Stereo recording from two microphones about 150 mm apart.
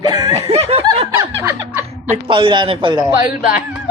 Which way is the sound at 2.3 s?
35° right (ahead or behind).